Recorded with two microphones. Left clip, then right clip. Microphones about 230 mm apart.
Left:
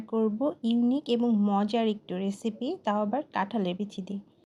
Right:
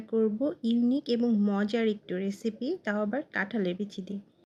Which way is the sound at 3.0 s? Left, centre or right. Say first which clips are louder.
Left 2 dB; centre.